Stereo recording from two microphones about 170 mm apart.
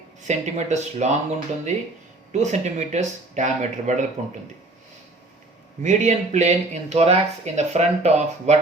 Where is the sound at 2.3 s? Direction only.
45° right (ahead or behind).